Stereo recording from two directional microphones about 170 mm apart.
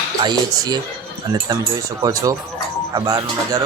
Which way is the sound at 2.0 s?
20° right (ahead or behind).